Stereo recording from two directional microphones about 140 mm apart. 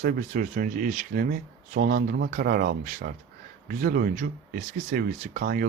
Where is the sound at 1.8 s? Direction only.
90° right.